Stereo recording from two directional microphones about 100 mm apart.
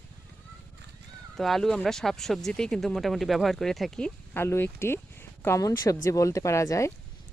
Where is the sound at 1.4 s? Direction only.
5° left (ahead or behind).